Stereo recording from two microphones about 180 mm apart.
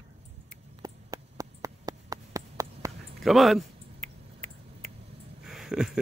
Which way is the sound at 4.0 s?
40° right (ahead or behind).